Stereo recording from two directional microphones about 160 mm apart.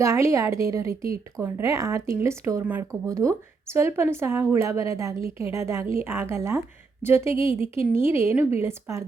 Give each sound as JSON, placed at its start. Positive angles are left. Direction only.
{"t": 0.0, "sound": "a woman's voice", "side_deg": -20}